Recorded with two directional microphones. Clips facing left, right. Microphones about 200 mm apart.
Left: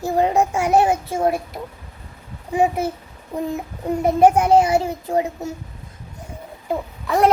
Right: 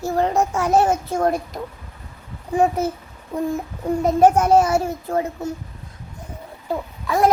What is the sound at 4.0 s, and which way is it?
Speech, 10° left (ahead or behind).